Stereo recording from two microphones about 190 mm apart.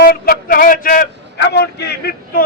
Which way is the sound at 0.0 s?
50° left (ahead or behind).